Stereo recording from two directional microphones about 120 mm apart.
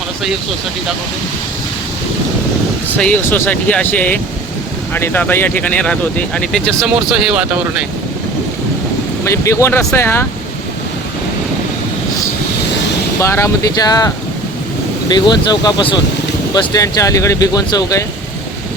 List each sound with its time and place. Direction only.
3.0 s speech: 15° left (ahead or behind)
6.8 s speech: 10° right (ahead or behind)
9.2 s speech: 25° left (ahead or behind)
13.1 s speech: 25° left (ahead or behind)
15.1 s speech: 35° left (ahead or behind)
16.6 s speech: 30° left (ahead or behind)